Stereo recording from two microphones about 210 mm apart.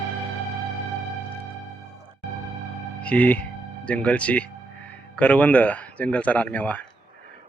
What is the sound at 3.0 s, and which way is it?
Speech, 5° left (ahead or behind).